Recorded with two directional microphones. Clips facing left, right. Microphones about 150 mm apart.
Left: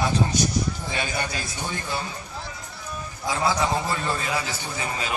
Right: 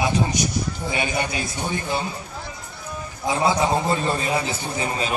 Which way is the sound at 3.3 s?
20° right (ahead or behind).